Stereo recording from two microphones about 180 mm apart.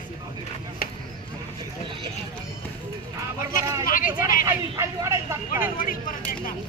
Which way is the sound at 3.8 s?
50° left (ahead or behind).